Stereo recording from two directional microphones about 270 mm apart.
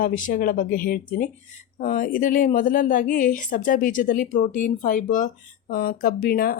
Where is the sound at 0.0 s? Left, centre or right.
Left.